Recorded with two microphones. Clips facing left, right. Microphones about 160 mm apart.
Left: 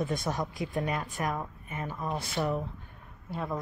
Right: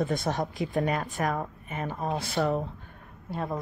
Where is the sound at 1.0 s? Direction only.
70° right (ahead or behind).